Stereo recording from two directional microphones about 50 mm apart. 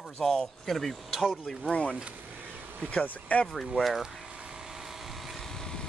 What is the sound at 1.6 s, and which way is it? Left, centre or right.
Speech, left.